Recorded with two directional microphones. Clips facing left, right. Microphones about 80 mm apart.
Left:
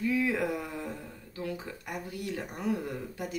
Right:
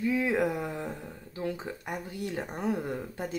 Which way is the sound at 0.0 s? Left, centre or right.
Right.